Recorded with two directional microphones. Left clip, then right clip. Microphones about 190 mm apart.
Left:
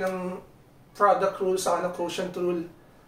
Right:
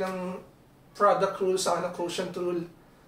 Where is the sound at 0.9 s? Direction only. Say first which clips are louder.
Left 2 dB; 15° left (ahead or behind).